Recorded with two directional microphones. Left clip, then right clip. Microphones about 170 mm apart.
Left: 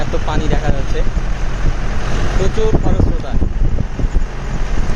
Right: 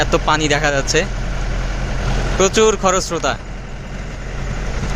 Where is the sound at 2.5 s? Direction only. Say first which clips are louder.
Right 6 dB; 30° right (ahead or behind).